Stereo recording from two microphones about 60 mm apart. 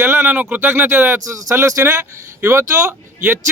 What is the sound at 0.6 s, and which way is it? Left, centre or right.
Speech, right.